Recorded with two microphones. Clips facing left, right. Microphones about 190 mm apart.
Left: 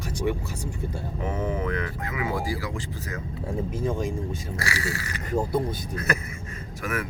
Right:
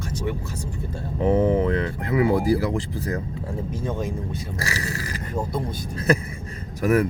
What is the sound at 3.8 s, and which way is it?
Speech, centre (ahead or behind).